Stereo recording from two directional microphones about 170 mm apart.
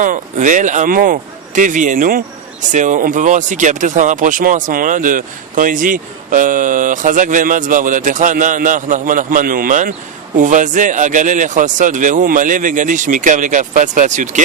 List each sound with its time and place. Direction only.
0.0 s a man's voice: 50° right (ahead or behind)